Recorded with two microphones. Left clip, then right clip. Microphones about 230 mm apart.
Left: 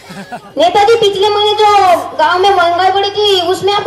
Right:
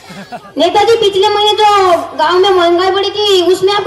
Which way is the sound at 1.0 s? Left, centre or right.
Right.